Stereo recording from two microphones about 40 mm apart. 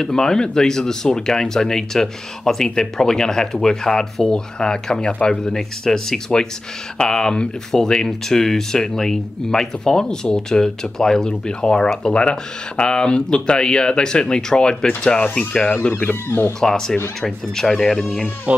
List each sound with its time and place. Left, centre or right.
0.0 s speech: centre
5.5 s speech: centre
16.3 s speech: left
16.5 s speech: centre